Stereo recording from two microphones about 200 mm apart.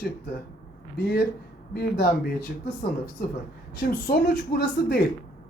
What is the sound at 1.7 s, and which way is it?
Speech, 50° left (ahead or behind).